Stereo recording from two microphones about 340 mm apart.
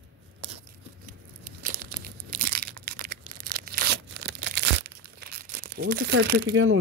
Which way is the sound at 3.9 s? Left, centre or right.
Right.